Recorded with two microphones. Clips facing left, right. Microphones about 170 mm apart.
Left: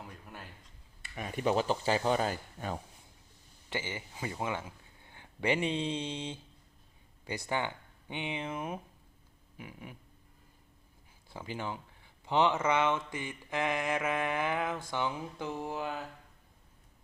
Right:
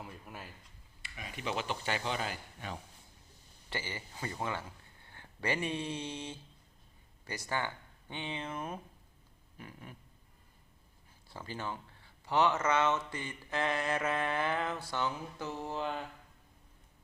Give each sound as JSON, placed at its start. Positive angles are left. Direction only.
{"t": 0.0, "sound": "a sound", "side_deg": 0}
{"t": 1.1, "sound": "speech", "side_deg": 45}
{"t": 3.7, "sound": "speech", "side_deg": 20}
{"t": 11.3, "sound": "speech", "side_deg": 15}